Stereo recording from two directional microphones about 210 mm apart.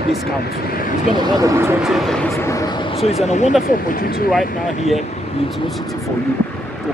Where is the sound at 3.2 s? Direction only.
35° left (ahead or behind).